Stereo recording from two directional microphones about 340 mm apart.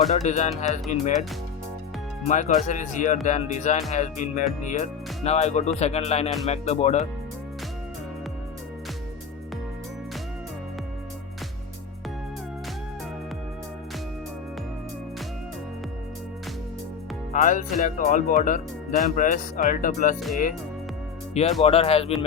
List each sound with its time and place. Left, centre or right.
0.1 s speech: centre
2.2 s speech: left
17.3 s speech: left
20.1 s speech: centre
21.6 s speech: centre